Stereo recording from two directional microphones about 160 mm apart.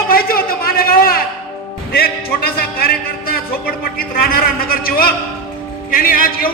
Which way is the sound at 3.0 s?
65° left (ahead or behind).